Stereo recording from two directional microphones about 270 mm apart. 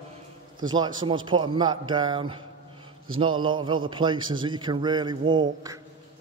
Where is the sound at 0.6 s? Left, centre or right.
Centre.